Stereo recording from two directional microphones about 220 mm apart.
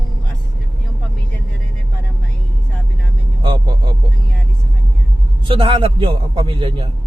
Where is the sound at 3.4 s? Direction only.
20° right (ahead or behind).